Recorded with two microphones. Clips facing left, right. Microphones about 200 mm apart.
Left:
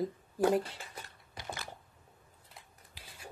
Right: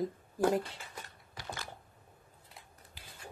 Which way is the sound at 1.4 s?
20° left (ahead or behind).